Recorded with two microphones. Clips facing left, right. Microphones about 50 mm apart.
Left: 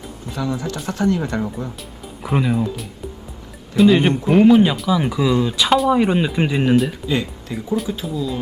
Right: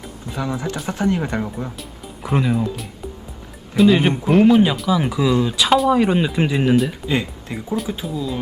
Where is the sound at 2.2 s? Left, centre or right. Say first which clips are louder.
Even; centre.